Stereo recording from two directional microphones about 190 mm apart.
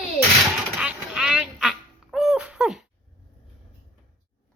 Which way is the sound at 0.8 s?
5° right (ahead or behind).